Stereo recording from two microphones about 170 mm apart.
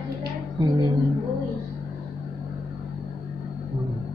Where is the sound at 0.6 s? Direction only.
25° right (ahead or behind).